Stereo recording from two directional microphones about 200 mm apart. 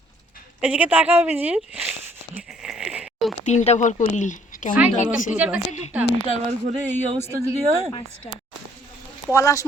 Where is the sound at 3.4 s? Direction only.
35° left (ahead or behind).